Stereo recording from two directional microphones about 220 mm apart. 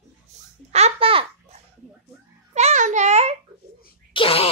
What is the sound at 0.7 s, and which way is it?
Babbling, 25° right (ahead or behind).